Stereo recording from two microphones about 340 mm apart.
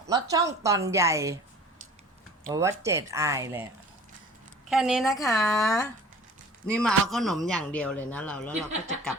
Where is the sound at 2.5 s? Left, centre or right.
Centre.